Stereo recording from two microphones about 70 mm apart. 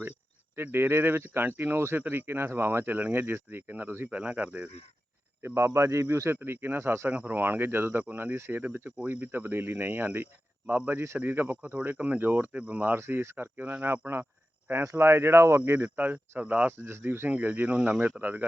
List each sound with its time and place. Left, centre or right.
0.5 s speech: right
4.2 s speech: centre
5.4 s speech: right
7.1 s speech: right
13.0 s speech: right
16.7 s speech: right; by 18.0 s centre
18.2 s speech: right